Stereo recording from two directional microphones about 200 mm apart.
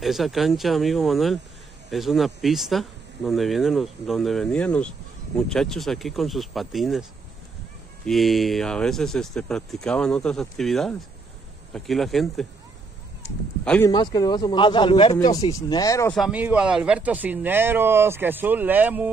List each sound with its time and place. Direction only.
0.0 s speech: centre (ahead or behind)
13.7 s speech: 10° left (ahead or behind)
13.9 s speech: 20° left (ahead or behind)
16.2 s speech: 5° right (ahead or behind)